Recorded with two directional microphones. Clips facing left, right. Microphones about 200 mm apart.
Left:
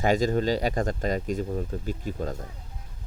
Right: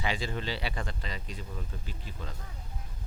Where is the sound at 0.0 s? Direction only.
45° left (ahead or behind).